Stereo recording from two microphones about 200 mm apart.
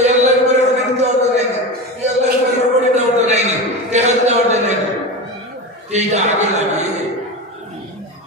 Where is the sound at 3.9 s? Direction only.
35° right (ahead or behind).